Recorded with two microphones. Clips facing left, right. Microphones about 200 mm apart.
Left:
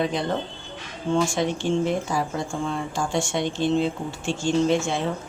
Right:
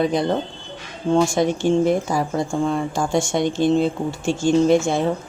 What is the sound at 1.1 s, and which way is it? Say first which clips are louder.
Speech: right 5 dB; 40° right (ahead or behind).